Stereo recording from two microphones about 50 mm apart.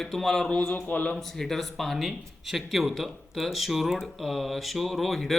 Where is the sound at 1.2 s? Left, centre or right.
Centre.